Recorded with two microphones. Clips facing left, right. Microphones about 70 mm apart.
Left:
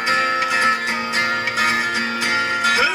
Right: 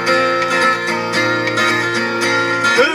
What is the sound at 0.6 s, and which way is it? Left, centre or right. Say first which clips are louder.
Music: right 4 dB; right.